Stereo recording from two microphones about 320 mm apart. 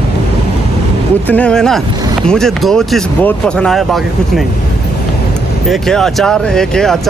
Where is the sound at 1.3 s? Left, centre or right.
Centre.